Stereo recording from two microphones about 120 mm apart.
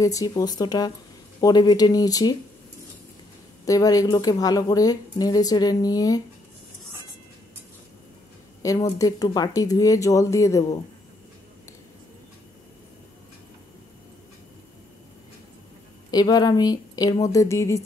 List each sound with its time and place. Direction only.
0.0 s speech: 30° left (ahead or behind)
3.6 s speech: 30° left (ahead or behind)
8.6 s speech: 30° left (ahead or behind)
16.1 s speech: 30° left (ahead or behind)